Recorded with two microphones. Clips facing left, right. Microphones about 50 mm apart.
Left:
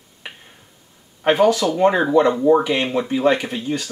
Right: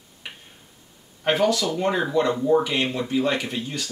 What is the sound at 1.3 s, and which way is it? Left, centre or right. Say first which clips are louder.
Speech: left 6 dB; left.